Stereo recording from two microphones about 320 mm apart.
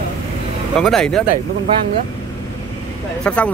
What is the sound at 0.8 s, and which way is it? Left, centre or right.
Speech, centre.